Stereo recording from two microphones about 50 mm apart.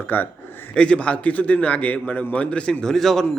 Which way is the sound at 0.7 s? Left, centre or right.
Left.